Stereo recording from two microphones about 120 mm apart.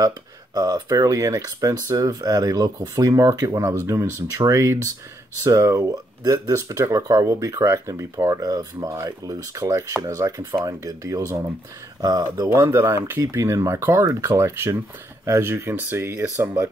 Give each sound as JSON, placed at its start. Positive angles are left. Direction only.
{"t": 0.6, "sound": "speech", "side_deg": -30}
{"t": 12.4, "sound": "speech", "side_deg": -20}